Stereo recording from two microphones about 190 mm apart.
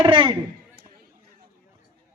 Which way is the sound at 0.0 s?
25° right (ahead or behind).